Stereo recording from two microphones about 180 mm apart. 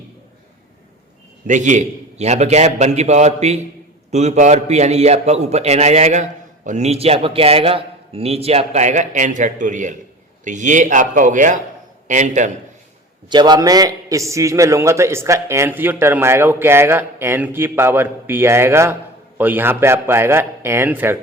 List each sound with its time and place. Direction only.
1.5 s a man's voice: 45° right (ahead or behind)
13.3 s a man's voice: 25° right (ahead or behind)